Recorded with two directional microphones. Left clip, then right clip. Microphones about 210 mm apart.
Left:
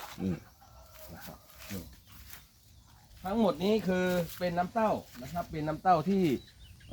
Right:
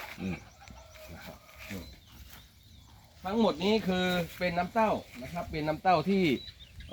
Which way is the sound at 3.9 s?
25° left (ahead or behind).